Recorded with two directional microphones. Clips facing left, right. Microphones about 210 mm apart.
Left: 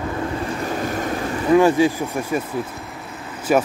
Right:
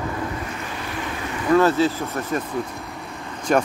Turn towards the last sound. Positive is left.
turn(degrees=5)  # may be behind; listen again after turning